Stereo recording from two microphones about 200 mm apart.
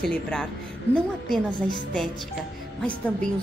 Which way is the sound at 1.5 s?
20° left (ahead or behind).